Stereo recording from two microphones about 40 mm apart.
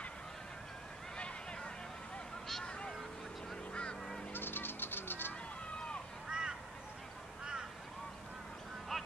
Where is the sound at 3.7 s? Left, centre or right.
Left.